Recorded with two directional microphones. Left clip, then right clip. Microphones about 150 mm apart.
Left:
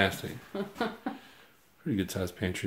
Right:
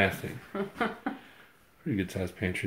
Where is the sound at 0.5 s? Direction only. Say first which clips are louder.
Right 2 dB; 90° left.